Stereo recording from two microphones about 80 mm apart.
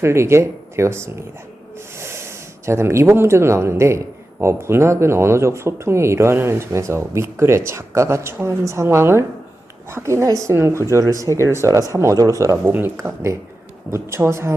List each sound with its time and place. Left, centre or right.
0.0 s speech: right
13.0 s speech: right